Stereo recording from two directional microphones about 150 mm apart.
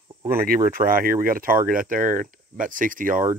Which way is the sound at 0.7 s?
70° right (ahead or behind).